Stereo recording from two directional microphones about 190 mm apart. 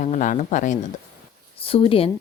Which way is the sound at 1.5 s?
30° left (ahead or behind).